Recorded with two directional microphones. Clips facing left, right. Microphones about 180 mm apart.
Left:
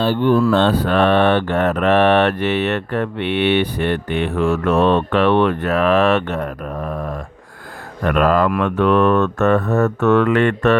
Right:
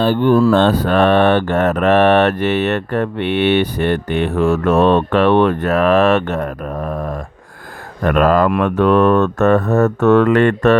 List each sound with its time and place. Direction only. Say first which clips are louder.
0.0 s mantra: right 3 dB; 50° right (ahead or behind)